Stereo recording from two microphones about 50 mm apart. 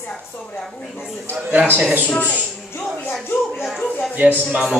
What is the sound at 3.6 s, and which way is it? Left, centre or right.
Speech, centre.